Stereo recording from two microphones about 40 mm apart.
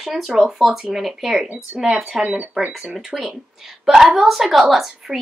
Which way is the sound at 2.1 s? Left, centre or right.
Centre.